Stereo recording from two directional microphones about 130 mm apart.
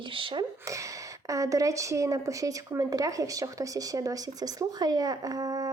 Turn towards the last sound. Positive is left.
turn(degrees=-30)  # may be behind; listen again after turning